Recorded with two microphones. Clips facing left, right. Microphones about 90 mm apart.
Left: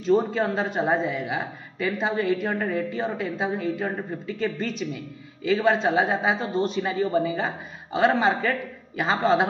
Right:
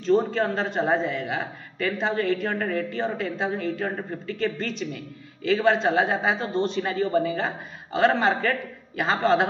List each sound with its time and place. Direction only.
0.0 s a man's voice: 5° left (ahead or behind)